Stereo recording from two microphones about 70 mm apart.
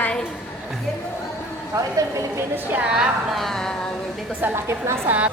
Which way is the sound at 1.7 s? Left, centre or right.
Right.